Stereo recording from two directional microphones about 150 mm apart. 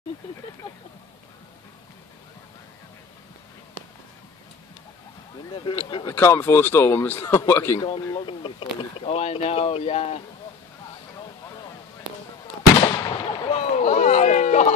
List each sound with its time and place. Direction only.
5.5 s speech: 30° left (ahead or behind)
6.1 s a man's voice: 15° left (ahead or behind)
7.8 s speech: 35° left (ahead or behind)
12.9 s fireworks: 25° left (ahead or behind)
13.4 s run: 45° left (ahead or behind)